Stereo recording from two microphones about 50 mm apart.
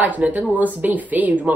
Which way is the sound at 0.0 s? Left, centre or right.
Right.